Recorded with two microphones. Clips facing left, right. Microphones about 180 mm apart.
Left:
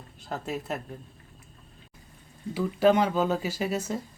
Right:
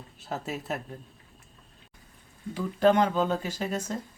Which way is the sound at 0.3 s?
Centre (ahead or behind).